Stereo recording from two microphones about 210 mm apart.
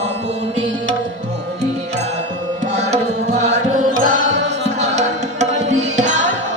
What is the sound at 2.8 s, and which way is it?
Music, 35° right (ahead or behind).